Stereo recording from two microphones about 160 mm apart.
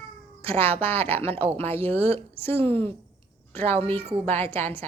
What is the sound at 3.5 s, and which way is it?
Speech, 10° left (ahead or behind).